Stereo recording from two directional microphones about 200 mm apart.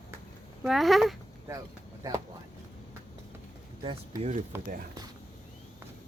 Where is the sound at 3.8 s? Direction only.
25° right (ahead or behind).